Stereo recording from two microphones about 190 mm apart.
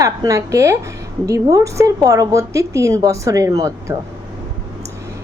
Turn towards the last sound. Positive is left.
turn(degrees=-15)  # may be behind; listen again after turning